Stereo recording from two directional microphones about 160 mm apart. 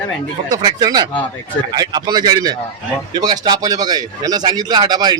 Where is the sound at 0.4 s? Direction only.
25° right (ahead or behind).